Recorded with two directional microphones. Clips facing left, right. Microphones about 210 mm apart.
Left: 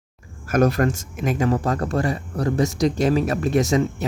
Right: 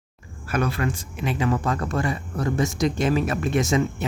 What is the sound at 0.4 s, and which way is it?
Speech, 45° left (ahead or behind).